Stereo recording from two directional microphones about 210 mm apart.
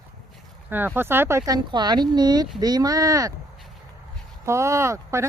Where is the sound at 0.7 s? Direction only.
10° right (ahead or behind).